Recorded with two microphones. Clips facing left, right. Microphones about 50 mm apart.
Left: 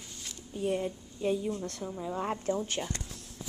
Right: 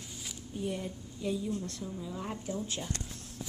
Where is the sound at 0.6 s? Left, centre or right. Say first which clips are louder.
Left 5 dB; left.